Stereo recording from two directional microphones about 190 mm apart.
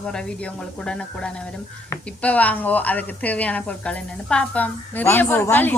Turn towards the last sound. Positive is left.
turn(degrees=10)  # may be behind; listen again after turning